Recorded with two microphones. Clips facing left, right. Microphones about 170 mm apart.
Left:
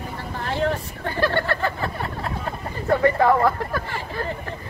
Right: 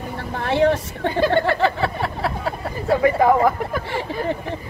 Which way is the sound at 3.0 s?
10° right (ahead or behind).